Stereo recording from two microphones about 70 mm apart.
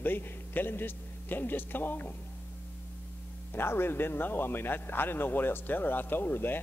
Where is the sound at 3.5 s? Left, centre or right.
Left.